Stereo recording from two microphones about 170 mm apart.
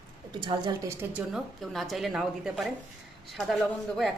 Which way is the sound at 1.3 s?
Centre (ahead or behind).